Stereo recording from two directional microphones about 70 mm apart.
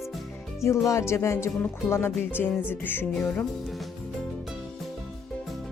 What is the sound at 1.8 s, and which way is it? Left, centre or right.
Speech, left.